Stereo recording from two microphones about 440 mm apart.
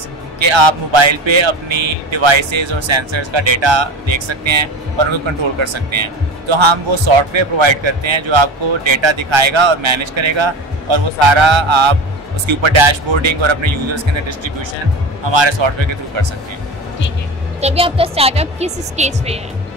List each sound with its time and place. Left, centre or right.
0.4 s a man's voice: right
15.2 s speech: right
17.6 s speech: centre